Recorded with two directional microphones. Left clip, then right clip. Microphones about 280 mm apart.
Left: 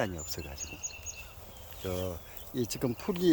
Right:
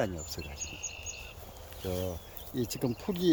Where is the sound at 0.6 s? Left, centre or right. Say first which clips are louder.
Right 1 dB; left.